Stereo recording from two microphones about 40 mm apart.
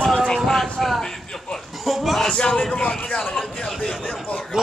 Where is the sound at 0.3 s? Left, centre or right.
Centre.